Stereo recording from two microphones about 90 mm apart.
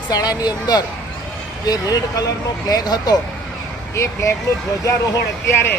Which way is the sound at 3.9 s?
30° left (ahead or behind).